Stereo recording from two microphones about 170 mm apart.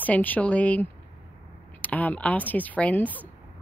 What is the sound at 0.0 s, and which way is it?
Speech, 10° left (ahead or behind).